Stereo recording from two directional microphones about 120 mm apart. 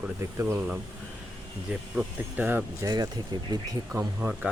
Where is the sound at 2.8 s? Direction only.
35° right (ahead or behind).